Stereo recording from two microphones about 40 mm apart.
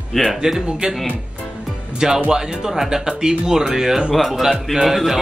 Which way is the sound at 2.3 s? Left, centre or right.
Centre.